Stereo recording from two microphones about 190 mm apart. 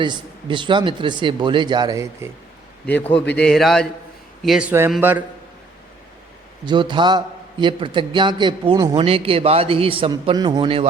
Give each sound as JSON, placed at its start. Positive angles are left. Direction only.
{"t": 0.0, "sound": "a man's voice", "side_deg": -25}
{"t": 3.1, "sound": "a man's voice", "side_deg": 10}
{"t": 6.7, "sound": "a man's voice", "side_deg": -25}